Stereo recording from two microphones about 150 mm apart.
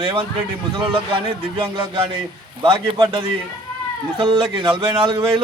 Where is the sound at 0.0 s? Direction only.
35° right (ahead or behind).